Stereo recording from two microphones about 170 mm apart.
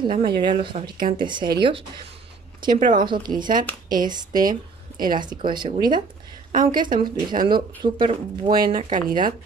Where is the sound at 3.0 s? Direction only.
25° right (ahead or behind).